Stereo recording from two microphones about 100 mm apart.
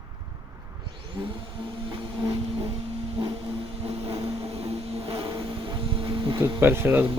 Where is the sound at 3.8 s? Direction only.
75° right (ahead or behind); by 6.4 s 55° right (ahead or behind).